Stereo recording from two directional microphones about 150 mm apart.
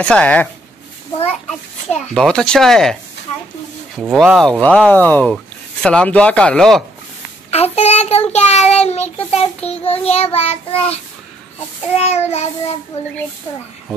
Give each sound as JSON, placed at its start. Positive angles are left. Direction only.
{"t": 0.0, "sound": "speech", "side_deg": 5}
{"t": 1.9, "sound": "a child's voice", "side_deg": 5}
{"t": 7.5, "sound": "child singing", "side_deg": 45}
{"t": 12.0, "sound": "child singing", "side_deg": 45}